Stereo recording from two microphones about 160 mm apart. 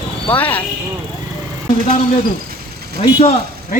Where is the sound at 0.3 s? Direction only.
10° left (ahead or behind).